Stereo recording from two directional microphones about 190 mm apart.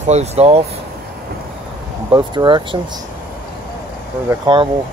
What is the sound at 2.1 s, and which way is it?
Speech, 20° right (ahead or behind).